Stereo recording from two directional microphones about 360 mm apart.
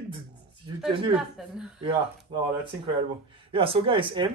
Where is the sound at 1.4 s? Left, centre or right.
Centre.